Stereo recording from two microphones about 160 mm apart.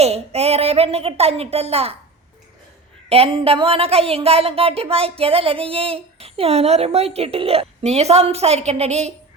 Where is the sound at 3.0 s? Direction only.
40° right (ahead or behind).